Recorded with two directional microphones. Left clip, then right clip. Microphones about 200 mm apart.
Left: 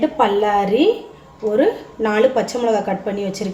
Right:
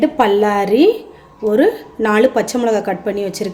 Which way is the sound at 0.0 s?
50° right (ahead or behind).